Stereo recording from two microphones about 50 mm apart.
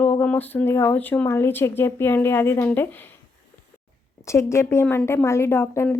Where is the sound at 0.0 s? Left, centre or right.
Left.